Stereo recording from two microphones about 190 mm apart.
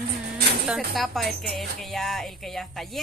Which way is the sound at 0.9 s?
Centre (ahead or behind).